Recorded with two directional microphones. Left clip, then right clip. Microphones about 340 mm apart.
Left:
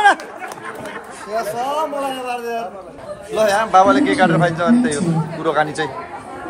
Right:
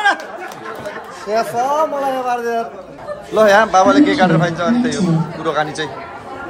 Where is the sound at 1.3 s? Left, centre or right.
Right.